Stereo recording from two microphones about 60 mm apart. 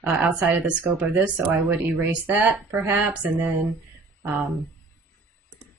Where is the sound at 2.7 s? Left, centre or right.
Right.